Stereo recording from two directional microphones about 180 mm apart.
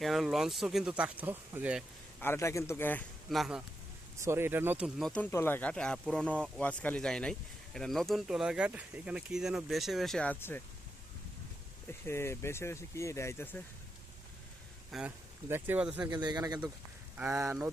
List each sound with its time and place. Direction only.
0.0 s speech: centre (ahead or behind)
2.2 s speech: 15° left (ahead or behind)
3.2 s speech: centre (ahead or behind)
4.2 s speech: 15° right (ahead or behind); by 10.6 s 10° left (ahead or behind)
11.9 s speech: 15° left (ahead or behind)
14.8 s speech: 5° right (ahead or behind)
16.0 s a man's voice: 25° right (ahead or behind)
17.2 s speech: 10° right (ahead or behind)